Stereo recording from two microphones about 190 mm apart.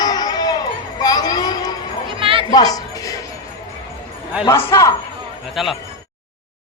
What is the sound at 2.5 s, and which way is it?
Music, 20° left (ahead or behind).